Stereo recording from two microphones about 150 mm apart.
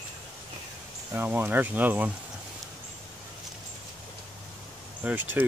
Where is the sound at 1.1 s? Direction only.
10° right (ahead or behind).